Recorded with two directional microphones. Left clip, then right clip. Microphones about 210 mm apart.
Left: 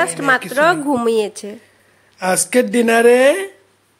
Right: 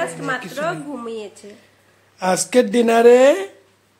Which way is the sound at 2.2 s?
5° left (ahead or behind).